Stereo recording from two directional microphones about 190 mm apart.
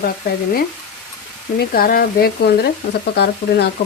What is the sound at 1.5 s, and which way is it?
Speech, 50° left (ahead or behind).